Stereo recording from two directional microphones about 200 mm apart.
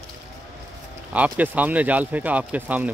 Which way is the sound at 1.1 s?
10° right (ahead or behind).